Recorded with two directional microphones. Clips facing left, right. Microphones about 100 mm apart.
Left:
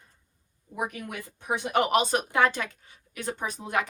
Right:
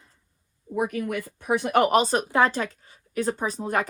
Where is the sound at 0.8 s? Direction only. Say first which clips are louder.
Right 7 dB; 50° right (ahead or behind).